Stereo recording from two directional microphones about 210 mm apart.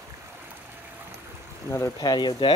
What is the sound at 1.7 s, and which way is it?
Speech, 15° left (ahead or behind).